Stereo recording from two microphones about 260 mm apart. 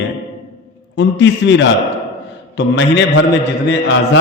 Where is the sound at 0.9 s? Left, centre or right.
Left.